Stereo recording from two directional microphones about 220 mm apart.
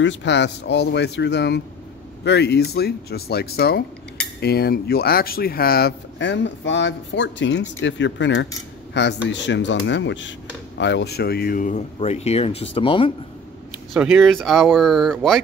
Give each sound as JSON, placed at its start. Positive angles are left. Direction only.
{"t": 0.0, "sound": "speech", "side_deg": 55}
{"t": 13.9, "sound": "speech", "side_deg": 0}